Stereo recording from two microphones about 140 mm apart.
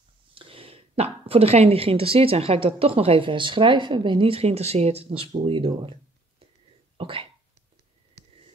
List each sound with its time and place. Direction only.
0.3 s speech: 40° right (ahead or behind)
7.0 s cough: 40° right (ahead or behind)